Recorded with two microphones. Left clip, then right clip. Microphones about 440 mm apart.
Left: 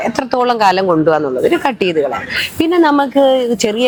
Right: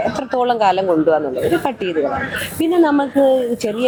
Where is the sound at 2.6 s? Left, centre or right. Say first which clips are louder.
Left 3 dB; left.